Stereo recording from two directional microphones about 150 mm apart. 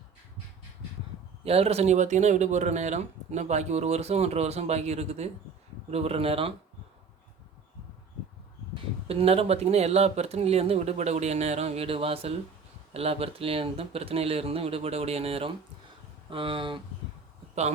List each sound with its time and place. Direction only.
1.5 s speech: 40° right (ahead or behind)
8.7 s speech: 40° right (ahead or behind)